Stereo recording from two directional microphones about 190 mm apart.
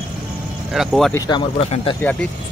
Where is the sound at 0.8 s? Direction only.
Centre (ahead or behind).